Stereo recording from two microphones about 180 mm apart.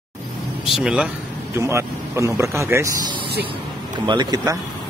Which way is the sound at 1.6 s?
15° right (ahead or behind).